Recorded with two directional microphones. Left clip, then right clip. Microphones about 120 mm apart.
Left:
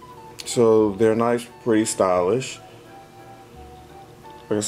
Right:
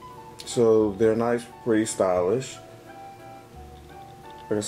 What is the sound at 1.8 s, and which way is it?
Speech, 15° left (ahead or behind).